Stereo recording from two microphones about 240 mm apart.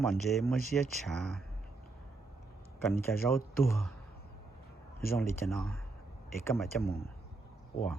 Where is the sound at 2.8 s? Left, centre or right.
Centre.